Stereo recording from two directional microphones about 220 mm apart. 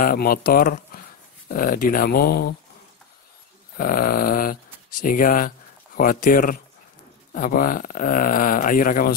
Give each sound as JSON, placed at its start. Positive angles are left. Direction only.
{"t": 0.0, "sound": "speech", "side_deg": 40}
{"t": 3.7, "sound": "speech", "side_deg": 40}